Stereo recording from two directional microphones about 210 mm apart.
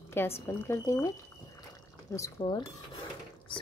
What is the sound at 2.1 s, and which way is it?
Speech, 20° left (ahead or behind).